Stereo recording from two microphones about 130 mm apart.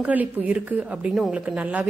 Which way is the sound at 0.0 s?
10° right (ahead or behind).